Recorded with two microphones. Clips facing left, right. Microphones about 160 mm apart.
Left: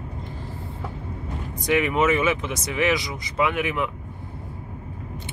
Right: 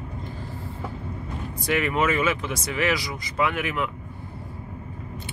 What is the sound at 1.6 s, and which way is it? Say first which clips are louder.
Speech: left 3 dB; 15° left (ahead or behind).